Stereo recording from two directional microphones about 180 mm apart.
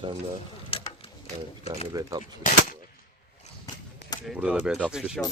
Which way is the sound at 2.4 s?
45° left (ahead or behind).